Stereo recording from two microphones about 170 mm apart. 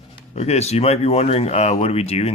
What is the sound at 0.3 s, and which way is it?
Speech, 40° left (ahead or behind).